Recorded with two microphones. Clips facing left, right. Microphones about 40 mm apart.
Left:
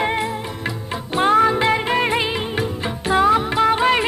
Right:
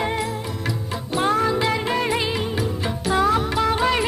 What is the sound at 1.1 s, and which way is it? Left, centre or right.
Music, left.